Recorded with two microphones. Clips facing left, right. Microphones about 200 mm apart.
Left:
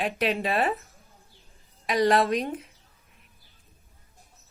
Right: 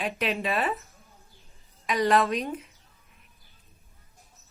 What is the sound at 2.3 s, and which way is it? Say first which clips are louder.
Speech: left 2 dB; 50° left (ahead or behind).